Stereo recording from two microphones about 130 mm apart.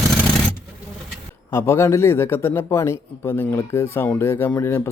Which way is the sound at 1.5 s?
20° left (ahead or behind).